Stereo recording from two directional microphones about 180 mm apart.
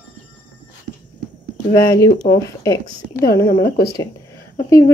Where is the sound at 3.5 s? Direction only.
65° left (ahead or behind).